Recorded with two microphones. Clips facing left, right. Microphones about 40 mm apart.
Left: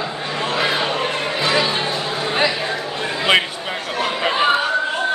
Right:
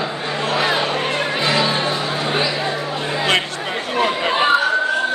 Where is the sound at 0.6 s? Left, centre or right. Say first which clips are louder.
Right 1 dB; centre.